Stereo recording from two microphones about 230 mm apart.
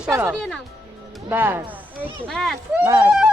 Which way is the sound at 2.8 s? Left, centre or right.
Centre.